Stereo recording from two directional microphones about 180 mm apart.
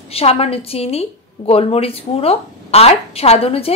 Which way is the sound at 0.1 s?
35° left (ahead or behind).